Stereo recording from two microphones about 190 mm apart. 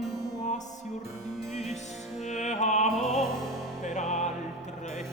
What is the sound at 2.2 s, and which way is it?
Music, 40° left (ahead or behind).